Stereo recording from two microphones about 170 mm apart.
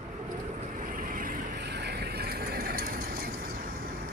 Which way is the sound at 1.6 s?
80° right.